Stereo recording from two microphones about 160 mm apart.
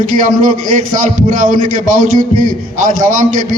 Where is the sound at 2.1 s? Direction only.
55° right (ahead or behind).